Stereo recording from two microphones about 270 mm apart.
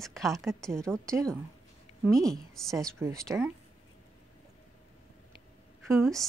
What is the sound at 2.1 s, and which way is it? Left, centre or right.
Speech, centre.